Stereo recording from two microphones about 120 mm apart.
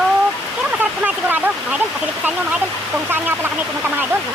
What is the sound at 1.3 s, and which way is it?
Waterfall, 15° right (ahead or behind).